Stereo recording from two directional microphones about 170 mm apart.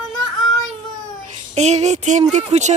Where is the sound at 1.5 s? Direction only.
40° right (ahead or behind).